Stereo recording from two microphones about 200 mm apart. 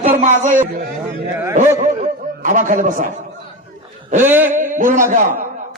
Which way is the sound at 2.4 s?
40° right (ahead or behind).